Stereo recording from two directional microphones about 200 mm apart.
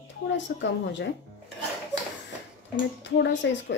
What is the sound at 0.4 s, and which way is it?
Speech, 65° left (ahead or behind).